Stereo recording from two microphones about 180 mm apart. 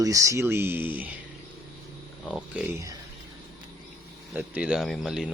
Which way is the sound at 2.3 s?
5° right (ahead or behind).